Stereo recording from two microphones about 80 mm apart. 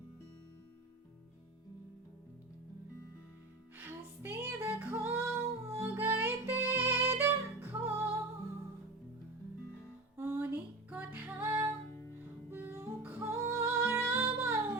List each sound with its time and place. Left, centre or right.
3.8 s music: right
10.2 s music: right